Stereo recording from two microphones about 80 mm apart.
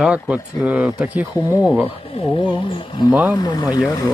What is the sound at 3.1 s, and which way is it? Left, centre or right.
Speech, right.